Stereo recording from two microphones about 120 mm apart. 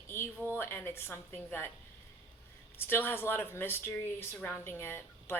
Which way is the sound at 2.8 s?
20° left (ahead or behind).